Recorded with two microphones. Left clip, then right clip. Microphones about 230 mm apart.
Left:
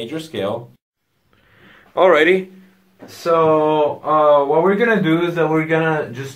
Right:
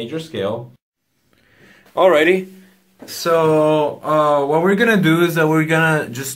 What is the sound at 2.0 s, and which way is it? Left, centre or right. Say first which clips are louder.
Speech: even; right.